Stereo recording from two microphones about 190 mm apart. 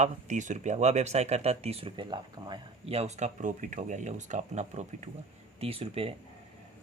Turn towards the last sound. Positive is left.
turn(degrees=-30)  # may be behind; listen again after turning